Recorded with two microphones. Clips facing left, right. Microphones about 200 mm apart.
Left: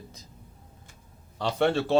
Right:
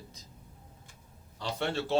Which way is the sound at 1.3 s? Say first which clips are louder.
Left 8 dB; 75° left (ahead or behind).